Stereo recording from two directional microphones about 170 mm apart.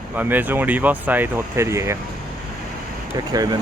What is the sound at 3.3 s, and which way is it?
Speech, 20° right (ahead or behind).